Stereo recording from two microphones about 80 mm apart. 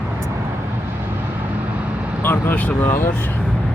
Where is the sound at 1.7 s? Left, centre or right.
Centre.